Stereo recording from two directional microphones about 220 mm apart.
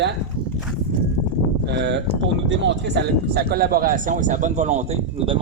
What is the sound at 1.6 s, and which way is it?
A man's voice, 50° right (ahead or behind).